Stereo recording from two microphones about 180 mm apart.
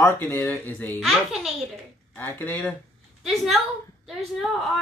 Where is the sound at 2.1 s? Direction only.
10° left (ahead or behind).